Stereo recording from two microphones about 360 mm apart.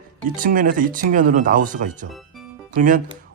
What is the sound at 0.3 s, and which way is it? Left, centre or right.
Speech, right.